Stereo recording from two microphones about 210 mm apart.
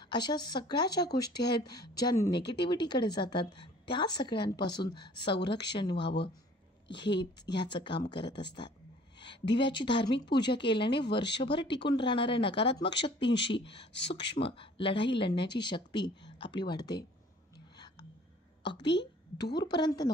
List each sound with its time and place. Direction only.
0.0 s a woman's voice: 20° left (ahead or behind)
5.9 s speech: 55° left (ahead or behind)
7.6 s a woman's voice: 20° left (ahead or behind)
8.1 s speech: 55° left (ahead or behind)
9.2 s a sound: 20° left (ahead or behind)
9.6 s a woman's voice: 20° left (ahead or behind)
10.9 s speech: 55° left (ahead or behind)
11.9 s a woman's voice: 20° left (ahead or behind)
13.2 s speech: 55° left (ahead or behind)
14.3 s a woman's voice: 25° left (ahead or behind)
18.9 s a woman's voice: 55° left (ahead or behind)
19.6 s a woman's voice: 20° left (ahead or behind)